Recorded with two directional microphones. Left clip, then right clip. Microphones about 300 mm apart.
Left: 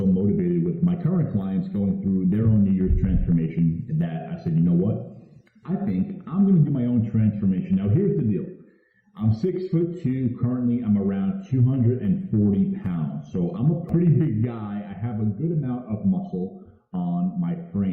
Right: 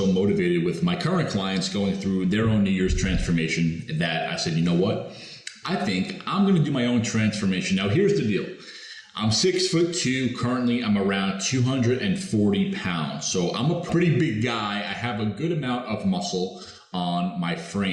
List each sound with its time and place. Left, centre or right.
0.3 s a sound: centre
1.5 s a man's voice: centre
13.6 s speech: right
13.9 s a man's voice: centre
16.0 s speech: right
17.2 s a man's voice: centre